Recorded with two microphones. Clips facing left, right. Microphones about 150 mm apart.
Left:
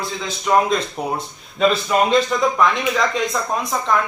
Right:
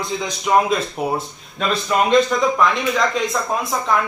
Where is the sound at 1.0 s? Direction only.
5° right (ahead or behind).